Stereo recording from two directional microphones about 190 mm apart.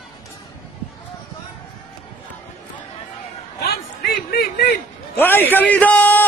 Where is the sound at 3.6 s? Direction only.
55° left (ahead or behind).